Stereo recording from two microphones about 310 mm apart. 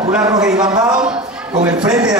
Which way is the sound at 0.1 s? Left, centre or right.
Centre.